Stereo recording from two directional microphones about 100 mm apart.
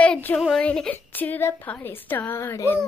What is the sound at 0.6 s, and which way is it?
A woman's voice, 10° left (ahead or behind).